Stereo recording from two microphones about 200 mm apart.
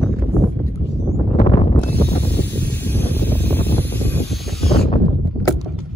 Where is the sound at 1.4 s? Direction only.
35° left (ahead or behind).